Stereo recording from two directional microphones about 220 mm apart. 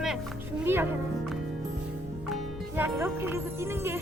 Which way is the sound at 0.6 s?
10° right (ahead or behind).